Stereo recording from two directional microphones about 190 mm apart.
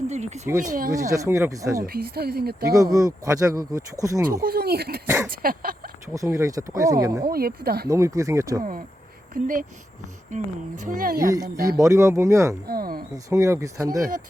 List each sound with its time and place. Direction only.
0.1 s speech: 35° right (ahead or behind)
1.1 s speech: 15° right (ahead or behind)
1.9 s speech: 55° right (ahead or behind)
2.6 s speech: 20° right (ahead or behind)
4.4 s speech: 55° right (ahead or behind)
5.0 s speech: 15° right (ahead or behind)
5.3 s speech: 50° right (ahead or behind)
6.1 s speech: 15° right (ahead or behind)
7.3 s speech: 55° right (ahead or behind)
7.9 s speech: 15° right (ahead or behind)
9.3 s speech: 45° right (ahead or behind)
11.8 s speech: 15° right (ahead or behind)
12.6 s speech: 50° right (ahead or behind)
13.3 s speech: 15° right (ahead or behind)